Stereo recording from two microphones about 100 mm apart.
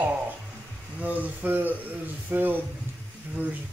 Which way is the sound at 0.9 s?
15° right (ahead or behind).